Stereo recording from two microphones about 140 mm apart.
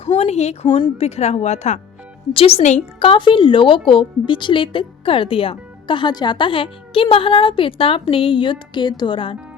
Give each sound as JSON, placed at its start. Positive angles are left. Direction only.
{"t": 0.0, "sound": "a woman's voice", "side_deg": 50}